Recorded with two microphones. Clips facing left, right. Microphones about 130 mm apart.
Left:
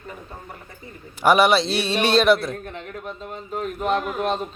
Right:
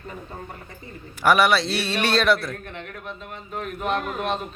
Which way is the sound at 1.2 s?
20° left (ahead or behind).